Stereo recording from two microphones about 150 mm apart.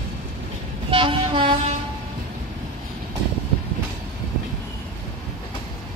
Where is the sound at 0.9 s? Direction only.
35° right (ahead or behind).